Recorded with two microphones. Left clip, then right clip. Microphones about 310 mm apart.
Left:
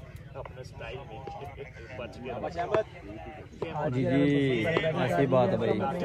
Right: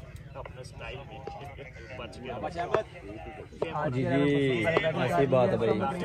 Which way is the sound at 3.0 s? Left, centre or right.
Left.